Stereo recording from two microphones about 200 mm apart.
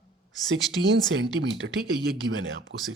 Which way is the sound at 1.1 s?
65° right (ahead or behind).